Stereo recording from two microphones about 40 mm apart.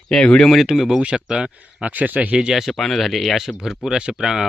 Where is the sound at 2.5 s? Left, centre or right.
Centre.